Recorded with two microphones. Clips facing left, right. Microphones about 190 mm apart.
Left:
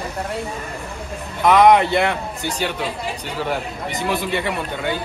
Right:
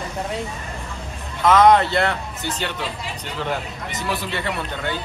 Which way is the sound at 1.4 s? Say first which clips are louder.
Left 1 dB; 20° left (ahead or behind).